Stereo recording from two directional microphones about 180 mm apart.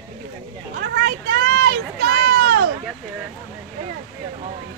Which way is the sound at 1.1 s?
65° right (ahead or behind).